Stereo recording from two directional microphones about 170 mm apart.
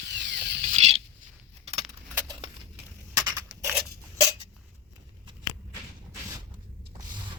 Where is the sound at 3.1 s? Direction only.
20° right (ahead or behind).